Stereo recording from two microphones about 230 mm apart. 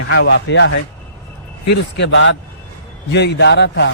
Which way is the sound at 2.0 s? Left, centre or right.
Left.